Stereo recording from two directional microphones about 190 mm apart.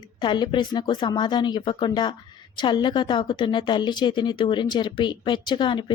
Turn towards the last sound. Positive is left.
turn(degrees=25)  # may be behind; listen again after turning